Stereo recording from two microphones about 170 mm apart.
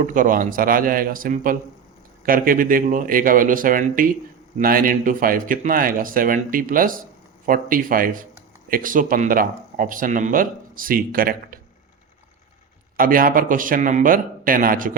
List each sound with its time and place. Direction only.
0.0 s speech: 50° right (ahead or behind)
13.0 s speech: 55° right (ahead or behind)